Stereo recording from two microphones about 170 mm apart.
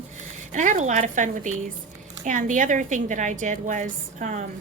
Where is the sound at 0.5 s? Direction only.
50° right (ahead or behind).